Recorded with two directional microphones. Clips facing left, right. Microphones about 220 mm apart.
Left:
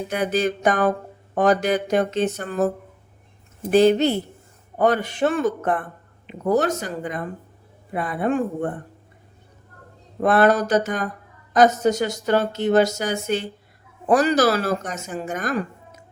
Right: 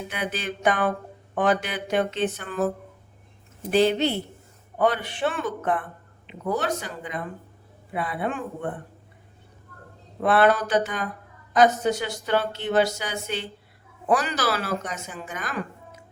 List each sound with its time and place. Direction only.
0.1 s speech: 40° left (ahead or behind)
3.7 s speech: 45° left (ahead or behind)
10.2 s speech: 45° left (ahead or behind)